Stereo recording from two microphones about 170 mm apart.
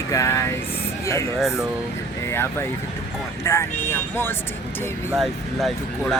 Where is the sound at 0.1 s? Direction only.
20° left (ahead or behind).